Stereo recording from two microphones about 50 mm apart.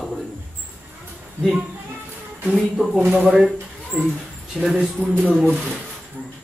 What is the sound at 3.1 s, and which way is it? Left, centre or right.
Speech, right.